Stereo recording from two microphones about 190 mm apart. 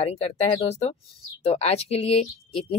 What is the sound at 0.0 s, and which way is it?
Speech, 35° left (ahead or behind).